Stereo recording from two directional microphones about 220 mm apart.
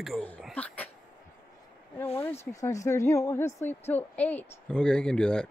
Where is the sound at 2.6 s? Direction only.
15° left (ahead or behind).